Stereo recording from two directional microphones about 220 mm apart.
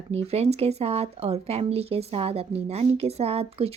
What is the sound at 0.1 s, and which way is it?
Speech, 30° right (ahead or behind).